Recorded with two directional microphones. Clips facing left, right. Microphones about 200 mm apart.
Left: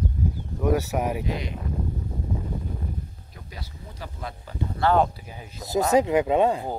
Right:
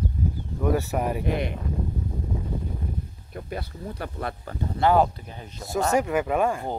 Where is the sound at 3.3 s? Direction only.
55° right (ahead or behind).